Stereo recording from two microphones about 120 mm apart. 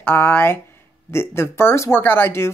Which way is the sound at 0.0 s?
15° left (ahead or behind).